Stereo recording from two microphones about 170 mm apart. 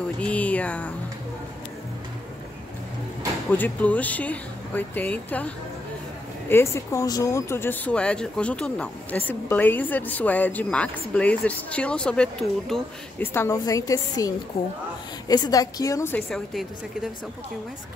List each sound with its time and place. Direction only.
0.2 s speech: 10° left (ahead or behind)
3.5 s speech: 10° left (ahead or behind)
6.5 s speech: 15° left (ahead or behind)
13.3 s a woman's voice: 15° left (ahead or behind)
16.2 s a woman's voice: 5° left (ahead or behind)